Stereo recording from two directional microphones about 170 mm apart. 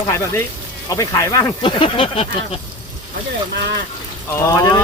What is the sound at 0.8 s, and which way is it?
Speech, 20° left (ahead or behind).